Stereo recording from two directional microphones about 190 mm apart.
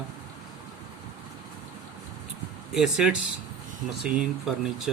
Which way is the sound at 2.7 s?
5° right (ahead or behind).